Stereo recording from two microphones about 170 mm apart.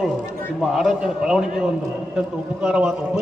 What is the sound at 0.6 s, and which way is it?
A man's voice, centre (ahead or behind).